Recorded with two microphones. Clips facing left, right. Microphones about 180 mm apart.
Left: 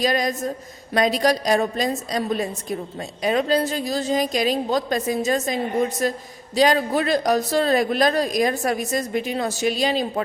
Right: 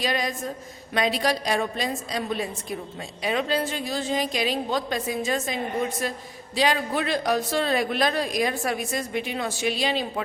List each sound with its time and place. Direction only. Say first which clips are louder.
0.0 s a woman's voice: left 5 dB; 40° left (ahead or behind)